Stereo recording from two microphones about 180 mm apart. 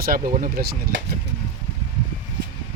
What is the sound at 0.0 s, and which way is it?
Speech, 50° right (ahead or behind).